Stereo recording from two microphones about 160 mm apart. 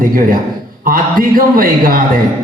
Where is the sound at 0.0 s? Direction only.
60° right (ahead or behind).